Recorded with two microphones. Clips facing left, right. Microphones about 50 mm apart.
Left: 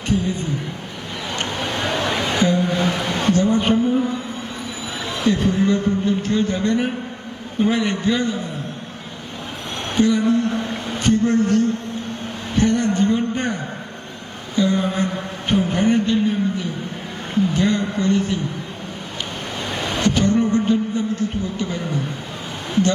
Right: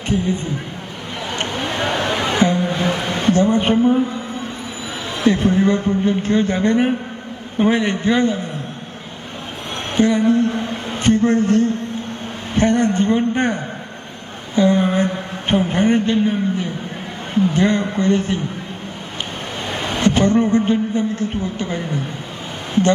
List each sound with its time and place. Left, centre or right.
0.1 s a woman's voice: right
2.0 s a sound: right
5.2 s a woman's voice: right
9.9 s a man's voice: right
14.5 s a sound: right
17.5 s a woman's voice: right
19.7 s a man's voice: right